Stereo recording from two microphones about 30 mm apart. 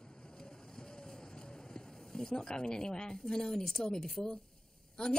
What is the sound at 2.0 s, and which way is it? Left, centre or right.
A woman's voice, centre.